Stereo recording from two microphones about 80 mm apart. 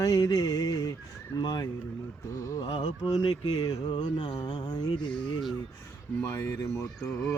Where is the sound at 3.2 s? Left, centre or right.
Left.